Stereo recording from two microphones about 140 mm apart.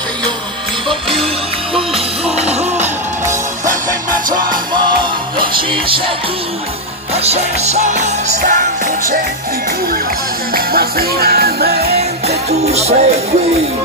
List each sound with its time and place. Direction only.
0.8 s music: 40° right (ahead or behind)
4.4 s music: 30° right (ahead or behind)
7.2 s music: 50° right (ahead or behind); by 9.2 s 75° right (ahead or behind)
10.5 s music: 90° right
12.0 s music: 50° right (ahead or behind)